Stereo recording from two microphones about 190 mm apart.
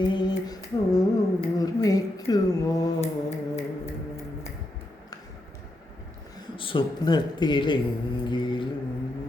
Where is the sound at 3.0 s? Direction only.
35° left (ahead or behind).